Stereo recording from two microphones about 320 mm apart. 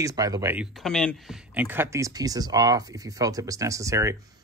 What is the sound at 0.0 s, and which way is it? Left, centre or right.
Speech, centre.